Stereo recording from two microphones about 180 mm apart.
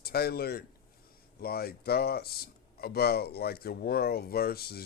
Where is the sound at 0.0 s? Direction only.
60° left (ahead or behind).